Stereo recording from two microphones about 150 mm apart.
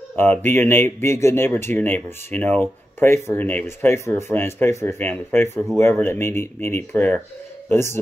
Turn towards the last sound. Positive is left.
turn(degrees=15)  # may be behind; listen again after turning